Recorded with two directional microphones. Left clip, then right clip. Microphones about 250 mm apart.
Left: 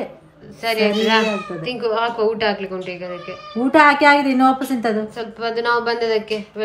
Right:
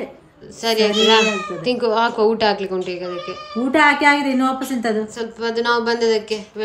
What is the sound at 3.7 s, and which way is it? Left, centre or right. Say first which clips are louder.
Speech: left 2 dB; centre.